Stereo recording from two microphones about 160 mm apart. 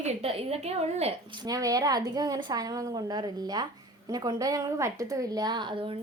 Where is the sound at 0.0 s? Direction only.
40° right (ahead or behind).